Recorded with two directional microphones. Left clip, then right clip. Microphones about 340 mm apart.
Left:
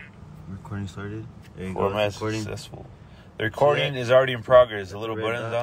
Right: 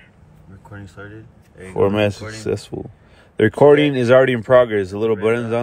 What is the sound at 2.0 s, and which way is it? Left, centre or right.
Speech, right.